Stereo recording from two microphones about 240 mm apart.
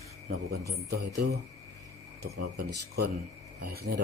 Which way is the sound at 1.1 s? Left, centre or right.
Right.